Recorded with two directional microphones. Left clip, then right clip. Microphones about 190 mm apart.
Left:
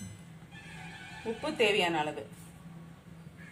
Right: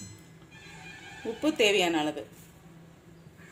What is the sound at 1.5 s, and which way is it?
Speech, 50° right (ahead or behind).